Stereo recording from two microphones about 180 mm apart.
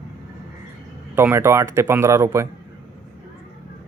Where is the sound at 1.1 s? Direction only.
15° right (ahead or behind).